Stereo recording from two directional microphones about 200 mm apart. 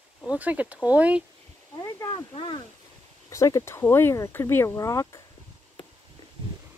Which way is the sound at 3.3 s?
15° left (ahead or behind).